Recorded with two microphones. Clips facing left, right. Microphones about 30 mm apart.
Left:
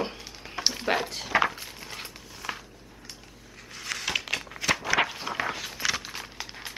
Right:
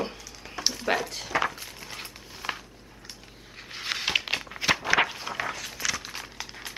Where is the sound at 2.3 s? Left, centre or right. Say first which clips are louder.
Right 2 dB; centre.